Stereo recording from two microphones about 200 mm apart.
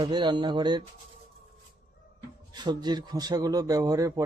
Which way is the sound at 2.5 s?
20° right (ahead or behind).